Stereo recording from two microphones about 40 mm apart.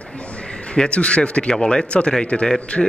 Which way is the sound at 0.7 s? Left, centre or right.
Left.